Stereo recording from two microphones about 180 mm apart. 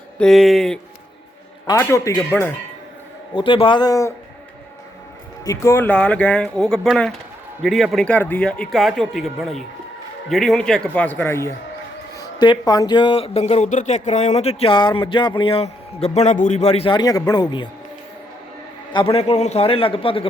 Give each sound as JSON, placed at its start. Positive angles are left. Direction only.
{"t": 0.2, "sound": "speech", "side_deg": 0}
{"t": 1.6, "sound": "speech", "side_deg": 20}
{"t": 3.3, "sound": "a man's voice", "side_deg": 30}
{"t": 5.5, "sound": "speech", "side_deg": 15}
{"t": 18.9, "sound": "speech", "side_deg": 30}